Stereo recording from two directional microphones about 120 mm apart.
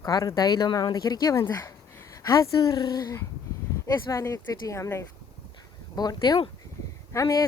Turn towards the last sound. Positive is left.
turn(degrees=25)  # may be behind; listen again after turning